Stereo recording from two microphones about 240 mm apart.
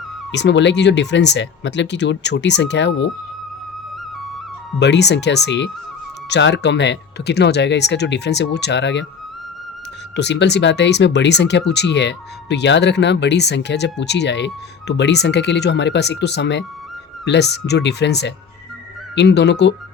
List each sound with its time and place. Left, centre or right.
0.3 s speech: left
4.8 s speech: left
10.2 s speech: left